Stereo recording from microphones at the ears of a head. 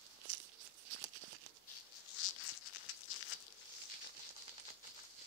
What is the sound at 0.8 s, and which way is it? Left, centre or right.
Tearing, right.